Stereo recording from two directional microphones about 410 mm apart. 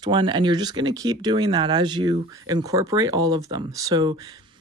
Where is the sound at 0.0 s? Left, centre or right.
Centre.